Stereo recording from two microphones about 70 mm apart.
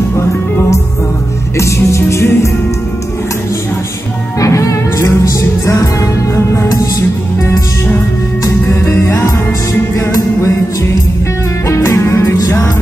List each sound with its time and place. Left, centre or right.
1.6 s music: left
4.4 s music: left
6.3 s music: left
8.5 s music: left
11.6 s music: left